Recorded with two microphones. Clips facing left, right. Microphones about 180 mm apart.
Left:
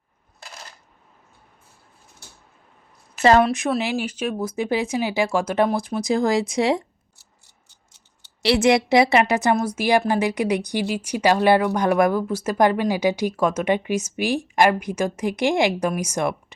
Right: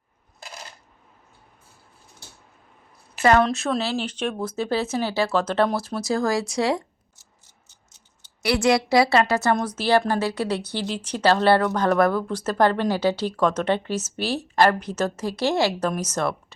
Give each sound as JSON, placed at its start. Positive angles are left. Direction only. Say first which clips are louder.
{"t": 3.2, "sound": "a woman's voice", "louder": "left 2 dB", "side_deg": 30}
{"t": 3.4, "sound": "a woman's voice", "louder": "left 2 dB", "side_deg": 10}
{"t": 8.4, "sound": "a woman's voice", "louder": "left 3 dB", "side_deg": 25}